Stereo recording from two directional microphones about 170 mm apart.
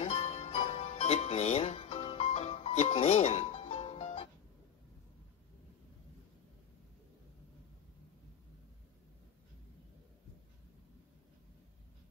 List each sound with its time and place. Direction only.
0.0 s music: 40° left (ahead or behind)